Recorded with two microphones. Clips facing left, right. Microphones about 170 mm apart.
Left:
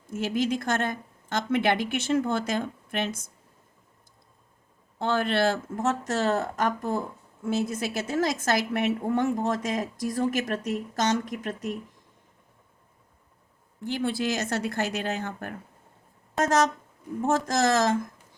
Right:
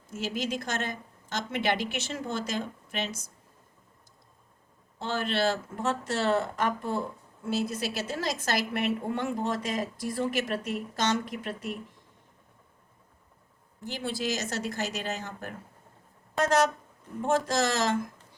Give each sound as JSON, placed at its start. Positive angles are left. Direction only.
{"t": 0.1, "sound": "a woman's voice", "side_deg": 55}
{"t": 4.9, "sound": "a woman's voice", "side_deg": 55}
{"t": 13.8, "sound": "speech", "side_deg": 55}
{"t": 17.2, "sound": "a woman's voice", "side_deg": 45}